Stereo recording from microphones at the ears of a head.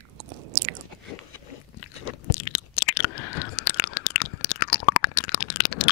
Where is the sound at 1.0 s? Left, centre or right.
Left.